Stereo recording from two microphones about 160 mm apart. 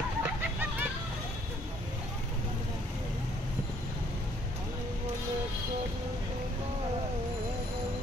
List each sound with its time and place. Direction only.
0.2 s vehicle: 10° right (ahead or behind)